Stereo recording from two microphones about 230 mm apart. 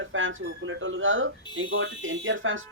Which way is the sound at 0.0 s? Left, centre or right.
Right.